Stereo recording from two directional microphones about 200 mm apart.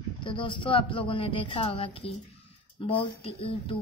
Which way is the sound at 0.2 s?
25° left (ahead or behind).